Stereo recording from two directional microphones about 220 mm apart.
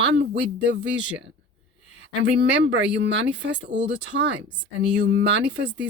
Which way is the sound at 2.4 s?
55° right (ahead or behind).